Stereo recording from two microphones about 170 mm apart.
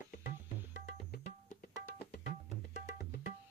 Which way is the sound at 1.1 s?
60° left (ahead or behind).